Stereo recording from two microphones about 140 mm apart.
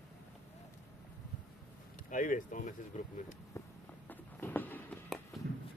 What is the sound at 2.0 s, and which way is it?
Speech, 70° left (ahead or behind).